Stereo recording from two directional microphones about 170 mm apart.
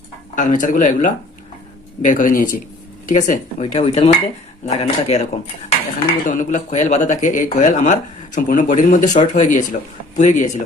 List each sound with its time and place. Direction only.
0.3 s speech: 50° left (ahead or behind)